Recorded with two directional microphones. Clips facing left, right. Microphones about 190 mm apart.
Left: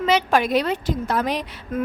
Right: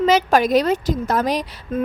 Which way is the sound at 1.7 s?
30° right (ahead or behind).